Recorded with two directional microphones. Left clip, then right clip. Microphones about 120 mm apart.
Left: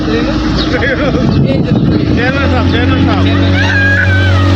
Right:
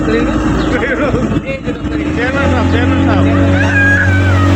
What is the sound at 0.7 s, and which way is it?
Speech, 25° left (ahead or behind).